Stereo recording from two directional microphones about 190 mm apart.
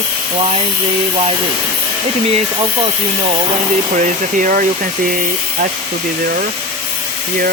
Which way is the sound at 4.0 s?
40° right (ahead or behind).